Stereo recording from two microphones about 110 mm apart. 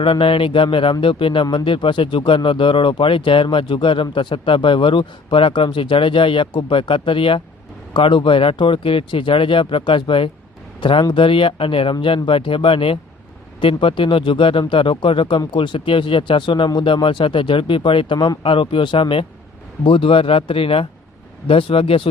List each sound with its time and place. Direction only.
0.0 s speech: 55° left (ahead or behind)